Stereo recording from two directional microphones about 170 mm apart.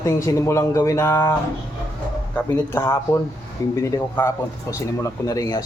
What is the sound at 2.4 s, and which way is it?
A man's voice, 15° left (ahead or behind).